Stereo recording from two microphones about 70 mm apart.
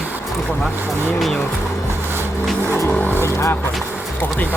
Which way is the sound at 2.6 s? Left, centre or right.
Left.